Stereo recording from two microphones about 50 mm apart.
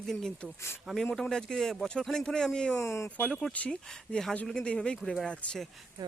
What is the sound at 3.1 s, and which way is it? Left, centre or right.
Speech, left.